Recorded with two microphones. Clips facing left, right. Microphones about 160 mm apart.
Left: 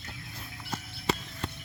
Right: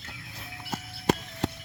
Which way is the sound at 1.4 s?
90° right.